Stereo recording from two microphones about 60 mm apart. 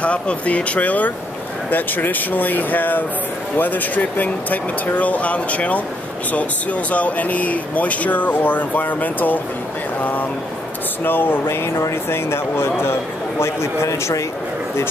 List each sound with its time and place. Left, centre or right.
0.0 s speech: left
11.1 s speech: left
13.8 s speech: left